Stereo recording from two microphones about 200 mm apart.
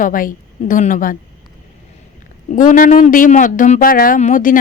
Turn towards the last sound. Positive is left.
turn(degrees=40)  # may be behind; listen again after turning